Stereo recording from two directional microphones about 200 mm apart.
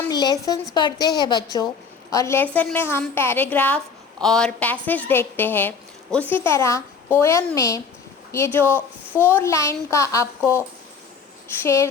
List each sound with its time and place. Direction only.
0.1 s a woman's voice: 20° left (ahead or behind)
11.4 s speech: 10° left (ahead or behind)